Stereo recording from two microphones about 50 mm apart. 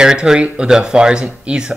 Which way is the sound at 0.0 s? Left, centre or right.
Centre.